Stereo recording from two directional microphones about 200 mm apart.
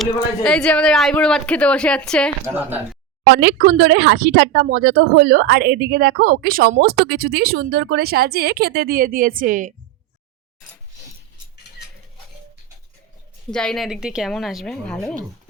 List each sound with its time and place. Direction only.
0.0 s speech: 5° left (ahead or behind)
2.6 s speech: 10° right (ahead or behind)
3.2 s speech: 50° right (ahead or behind)
13.5 s speech: 5° left (ahead or behind)